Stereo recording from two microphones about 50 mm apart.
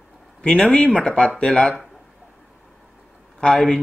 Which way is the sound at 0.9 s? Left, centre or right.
Centre.